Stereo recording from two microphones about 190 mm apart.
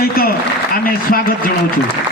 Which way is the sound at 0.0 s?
50° left (ahead or behind).